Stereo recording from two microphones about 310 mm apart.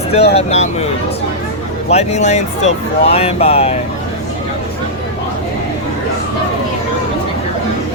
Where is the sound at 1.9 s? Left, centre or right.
Left.